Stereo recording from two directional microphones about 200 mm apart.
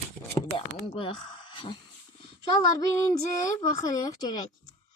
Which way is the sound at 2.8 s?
15° left (ahead or behind).